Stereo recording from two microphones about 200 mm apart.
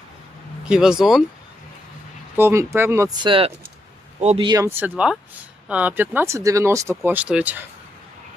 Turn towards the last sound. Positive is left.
turn(degrees=-5)  # may be behind; listen again after turning